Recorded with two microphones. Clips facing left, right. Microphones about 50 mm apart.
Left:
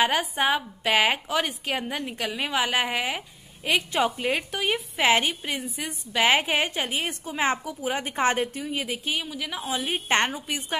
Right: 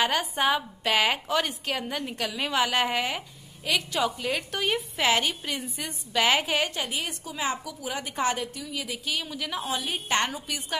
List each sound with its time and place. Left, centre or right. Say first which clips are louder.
0.0 s a woman's voice: left 2 dB; centre
3.6 s a woman's voice: left 3 dB; left; by 5.0 s centre
5.0 s a woman's voice: left 3 dB; left
5.6 s a woman's voice: left 2 dB; centre
6.1 s a woman's voice: left 2 dB; left
9.2 s a woman's voice: even; centre
9.9 s a woman's voice: left 4 dB; left